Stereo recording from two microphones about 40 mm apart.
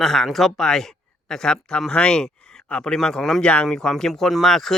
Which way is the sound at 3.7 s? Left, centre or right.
Centre.